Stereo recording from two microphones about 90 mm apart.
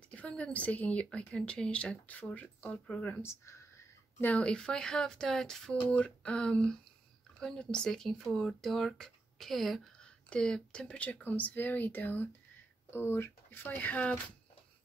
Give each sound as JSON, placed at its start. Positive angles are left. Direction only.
{"t": 0.1, "sound": "speech", "side_deg": 15}